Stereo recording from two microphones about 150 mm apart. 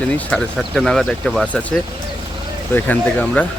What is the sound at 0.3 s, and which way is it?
Speech, 5° left (ahead or behind).